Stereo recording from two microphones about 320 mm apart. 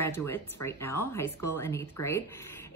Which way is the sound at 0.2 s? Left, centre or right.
Centre.